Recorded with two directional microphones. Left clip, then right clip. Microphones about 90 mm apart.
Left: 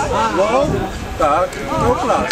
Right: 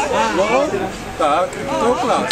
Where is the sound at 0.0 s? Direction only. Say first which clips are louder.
Left 1 dB; centre (ahead or behind).